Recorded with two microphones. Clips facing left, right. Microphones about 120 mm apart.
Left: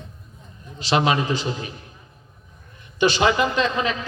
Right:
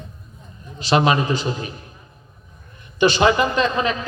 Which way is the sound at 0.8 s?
45° right (ahead or behind).